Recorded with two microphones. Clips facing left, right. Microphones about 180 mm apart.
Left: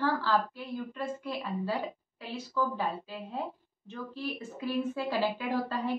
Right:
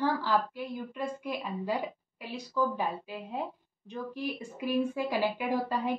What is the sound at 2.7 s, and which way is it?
Speech, 15° right (ahead or behind).